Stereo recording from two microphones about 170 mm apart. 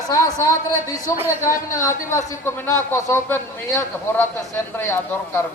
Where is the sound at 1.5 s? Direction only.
15° left (ahead or behind).